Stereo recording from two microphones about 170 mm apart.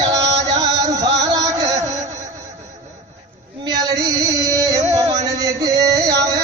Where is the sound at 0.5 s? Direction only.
20° right (ahead or behind).